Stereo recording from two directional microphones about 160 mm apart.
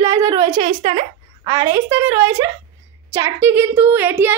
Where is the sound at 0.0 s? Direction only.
20° right (ahead or behind).